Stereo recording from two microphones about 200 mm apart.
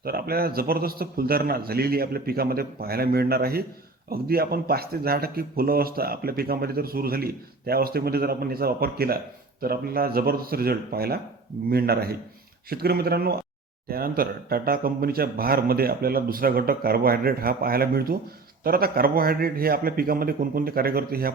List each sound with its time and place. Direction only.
0.0 s speech: 50° right (ahead or behind)